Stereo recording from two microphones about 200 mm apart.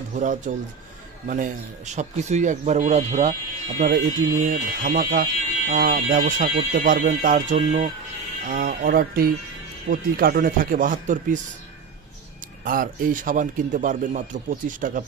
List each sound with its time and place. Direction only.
0.1 s a man's voice: 40° right (ahead or behind)
12.6 s a man's voice: 45° right (ahead or behind)